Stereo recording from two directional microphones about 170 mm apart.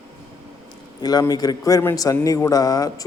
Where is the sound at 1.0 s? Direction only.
25° left (ahead or behind).